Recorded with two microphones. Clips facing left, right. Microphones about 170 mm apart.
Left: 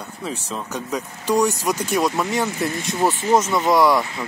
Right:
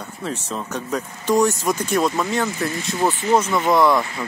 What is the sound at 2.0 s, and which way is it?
Speech, 15° left (ahead or behind).